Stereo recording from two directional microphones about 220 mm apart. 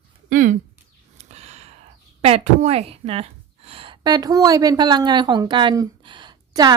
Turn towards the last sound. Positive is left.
turn(degrees=-20)  # may be behind; listen again after turning